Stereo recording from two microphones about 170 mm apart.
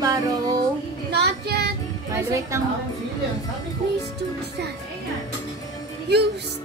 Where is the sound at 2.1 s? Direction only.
20° right (ahead or behind).